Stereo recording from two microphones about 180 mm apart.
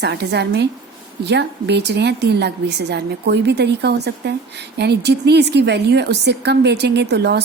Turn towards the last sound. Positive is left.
turn(degrees=-65)  # may be behind; listen again after turning